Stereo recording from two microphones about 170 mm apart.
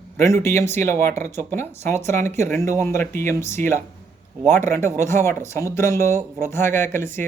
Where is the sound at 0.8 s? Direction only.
15° left (ahead or behind).